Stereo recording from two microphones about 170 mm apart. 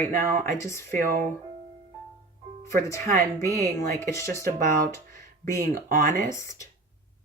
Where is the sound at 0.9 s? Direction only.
55° right (ahead or behind).